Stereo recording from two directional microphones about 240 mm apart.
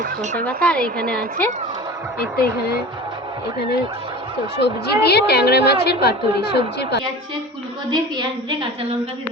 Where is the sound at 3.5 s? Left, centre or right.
Left.